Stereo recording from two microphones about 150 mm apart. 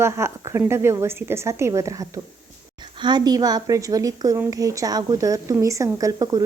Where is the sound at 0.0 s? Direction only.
20° right (ahead or behind).